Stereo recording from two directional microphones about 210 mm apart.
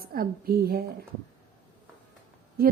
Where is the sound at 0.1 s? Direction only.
45° right (ahead or behind).